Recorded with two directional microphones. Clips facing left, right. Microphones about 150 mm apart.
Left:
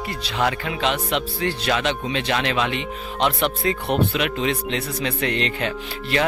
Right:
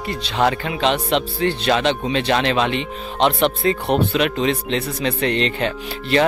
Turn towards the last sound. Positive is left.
turn(degrees=-30)  # may be behind; listen again after turning